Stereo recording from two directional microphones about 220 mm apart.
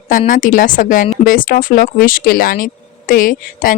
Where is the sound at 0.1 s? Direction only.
35° left (ahead or behind).